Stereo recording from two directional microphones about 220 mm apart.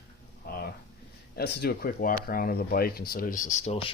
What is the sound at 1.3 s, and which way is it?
Speech, 45° left (ahead or behind).